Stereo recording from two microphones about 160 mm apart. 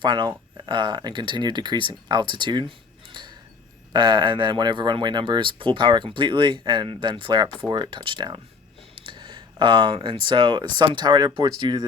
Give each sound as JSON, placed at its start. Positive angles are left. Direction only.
{"t": 0.0, "sound": "speech", "side_deg": -30}
{"t": 9.0, "sound": "a sound", "side_deg": -30}
{"t": 10.2, "sound": "speech", "side_deg": -30}